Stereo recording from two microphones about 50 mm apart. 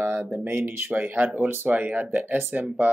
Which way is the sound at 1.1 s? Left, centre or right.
Right.